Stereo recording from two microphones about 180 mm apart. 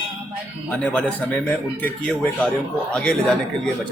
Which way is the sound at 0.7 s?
5° left (ahead or behind).